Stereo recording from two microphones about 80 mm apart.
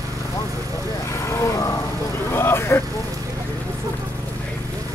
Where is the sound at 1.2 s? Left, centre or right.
Left.